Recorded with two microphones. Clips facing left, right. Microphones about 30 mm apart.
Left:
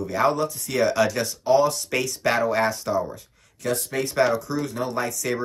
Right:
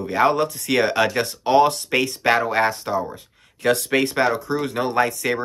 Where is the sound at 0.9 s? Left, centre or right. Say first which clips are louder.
Right 2 dB; right.